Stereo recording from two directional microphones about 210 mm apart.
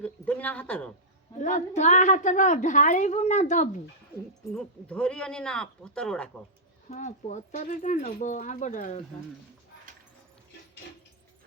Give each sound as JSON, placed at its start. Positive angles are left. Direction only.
{"t": 0.0, "sound": "a sound", "side_deg": 5}
{"t": 1.4, "sound": "a woman's voice", "side_deg": 35}
{"t": 4.5, "sound": "speech", "side_deg": 5}
{"t": 6.8, "sound": "a woman's voice", "side_deg": 35}